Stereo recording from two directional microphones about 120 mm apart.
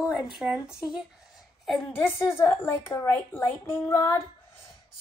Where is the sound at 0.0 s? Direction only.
5° right (ahead or behind).